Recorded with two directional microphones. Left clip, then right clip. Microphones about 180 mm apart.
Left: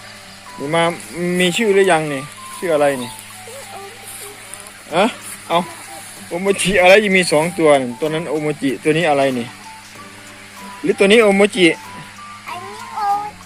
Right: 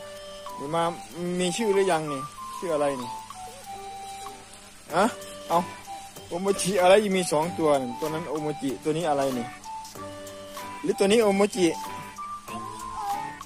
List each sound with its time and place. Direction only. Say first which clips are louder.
0.7 s speech: left 10 dB; 5° right (ahead or behind)
4.9 s speech: left 7 dB; 25° right (ahead or behind)
10.8 s speech: left 10 dB; 15° right (ahead or behind)